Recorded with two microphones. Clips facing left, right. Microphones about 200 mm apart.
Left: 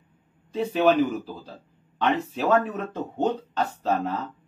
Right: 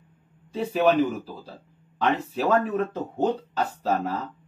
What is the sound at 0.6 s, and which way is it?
Speech, centre (ahead or behind).